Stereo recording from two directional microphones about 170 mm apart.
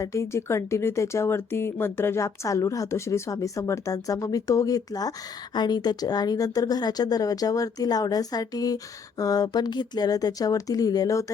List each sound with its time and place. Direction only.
0.0 s speech: 15° left (ahead or behind)